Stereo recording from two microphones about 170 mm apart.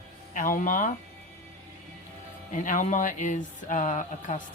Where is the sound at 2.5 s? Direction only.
50° left (ahead or behind).